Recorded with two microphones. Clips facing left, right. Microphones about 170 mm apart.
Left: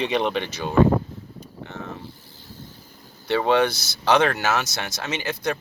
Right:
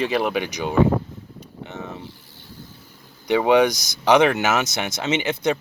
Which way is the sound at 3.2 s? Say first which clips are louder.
Right 3 dB; 15° right (ahead or behind).